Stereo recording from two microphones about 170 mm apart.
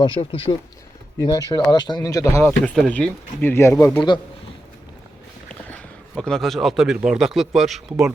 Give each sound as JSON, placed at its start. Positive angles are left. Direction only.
{"t": 0.0, "sound": "speech", "side_deg": 30}
{"t": 2.7, "sound": "speech", "side_deg": 5}
{"t": 5.6, "sound": "a man's voice", "side_deg": 5}